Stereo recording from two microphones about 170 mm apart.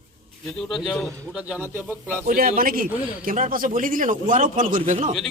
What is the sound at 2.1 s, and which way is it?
Speech, 50° right (ahead or behind).